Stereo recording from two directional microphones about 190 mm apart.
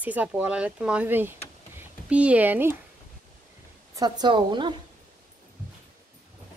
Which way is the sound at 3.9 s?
20° right (ahead or behind).